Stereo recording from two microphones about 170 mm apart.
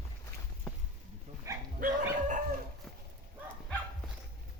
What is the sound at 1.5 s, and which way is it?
Bow-wow, 20° right (ahead or behind).